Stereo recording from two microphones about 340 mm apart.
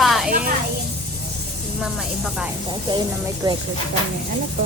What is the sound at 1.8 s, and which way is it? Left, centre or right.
Speech, centre.